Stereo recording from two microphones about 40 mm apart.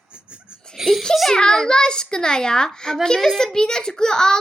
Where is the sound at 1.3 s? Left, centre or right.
Centre.